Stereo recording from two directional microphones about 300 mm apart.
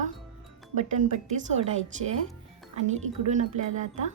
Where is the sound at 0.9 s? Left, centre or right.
Right.